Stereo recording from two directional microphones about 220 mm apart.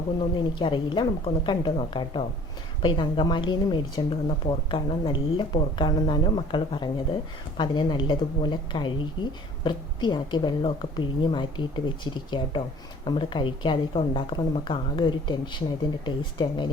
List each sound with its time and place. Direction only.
0.6 s a woman's voice: 20° left (ahead or behind)